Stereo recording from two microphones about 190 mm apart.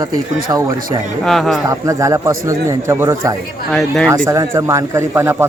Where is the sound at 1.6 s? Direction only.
15° right (ahead or behind).